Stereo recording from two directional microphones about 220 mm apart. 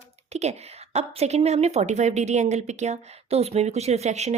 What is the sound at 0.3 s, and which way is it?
Speech, 30° right (ahead or behind).